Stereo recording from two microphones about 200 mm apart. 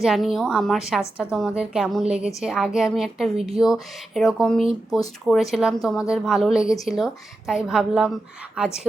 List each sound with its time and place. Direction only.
0.0 s speech: centre (ahead or behind)